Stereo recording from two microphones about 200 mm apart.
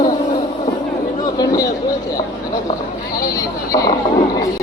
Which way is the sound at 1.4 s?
15° left (ahead or behind).